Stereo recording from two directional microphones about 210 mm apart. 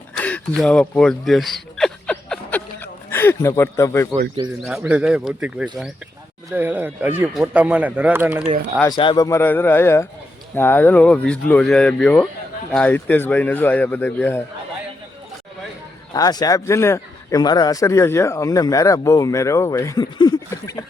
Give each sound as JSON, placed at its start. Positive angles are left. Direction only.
{"t": 0.2, "sound": "a sound", "side_deg": 5}
{"t": 4.6, "sound": "speech", "side_deg": -5}
{"t": 8.9, "sound": "speech", "side_deg": 20}
{"t": 16.1, "sound": "speech", "side_deg": 20}